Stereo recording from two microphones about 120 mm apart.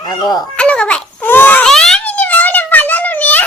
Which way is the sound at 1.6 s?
5° left (ahead or behind).